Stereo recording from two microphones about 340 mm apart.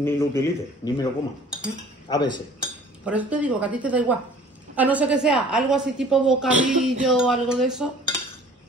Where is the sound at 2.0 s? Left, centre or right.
Centre.